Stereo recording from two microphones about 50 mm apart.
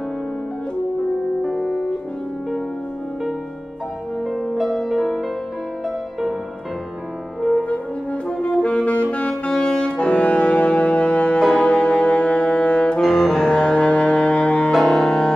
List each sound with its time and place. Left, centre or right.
1.4 s music: centre
4.2 s music: centre
4.6 s music: centre
7.5 s french horn: left
8.6 s saxophone: left
9.5 s brass instrument: centre
11.5 s music: left
13.0 s brass instrument: centre; by 14.7 s left
14.7 s music: centre